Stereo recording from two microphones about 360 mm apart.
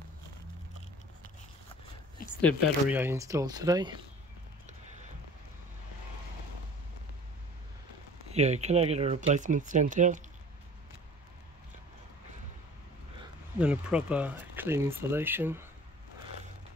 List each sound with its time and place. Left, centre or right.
2.4 s speech: centre
8.3 s speech: centre
13.6 s speech: centre